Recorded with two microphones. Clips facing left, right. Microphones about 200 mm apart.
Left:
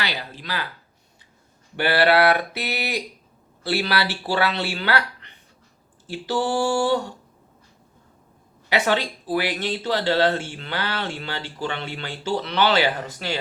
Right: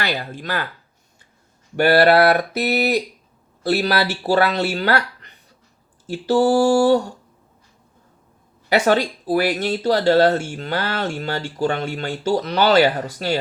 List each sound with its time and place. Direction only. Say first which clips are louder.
0.0 s speech: right 5 dB; 50° right (ahead or behind)
1.7 s speech: right 5 dB; 45° right (ahead or behind)
6.1 s a sound: right 8 dB; 40° right (ahead or behind)
8.7 s speech: right 5 dB; 45° right (ahead or behind)